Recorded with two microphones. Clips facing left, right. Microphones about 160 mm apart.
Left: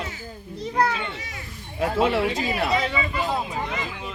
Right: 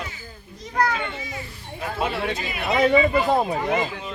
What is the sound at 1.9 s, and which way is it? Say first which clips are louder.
Speech: left 4 dB; 90° left.